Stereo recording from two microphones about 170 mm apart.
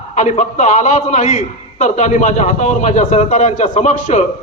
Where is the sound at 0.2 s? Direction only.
45° left (ahead or behind).